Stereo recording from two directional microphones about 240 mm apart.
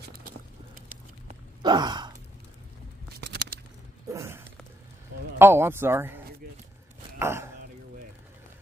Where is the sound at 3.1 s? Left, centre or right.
Right.